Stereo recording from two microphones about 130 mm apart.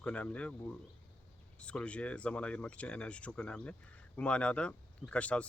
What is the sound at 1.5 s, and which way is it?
Speech, 10° left (ahead or behind).